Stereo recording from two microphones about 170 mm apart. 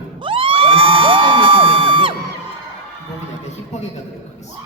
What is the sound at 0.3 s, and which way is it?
Crowd, 30° right (ahead or behind).